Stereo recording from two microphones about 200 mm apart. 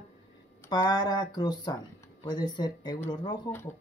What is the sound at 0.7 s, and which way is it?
Speech, 20° left (ahead or behind).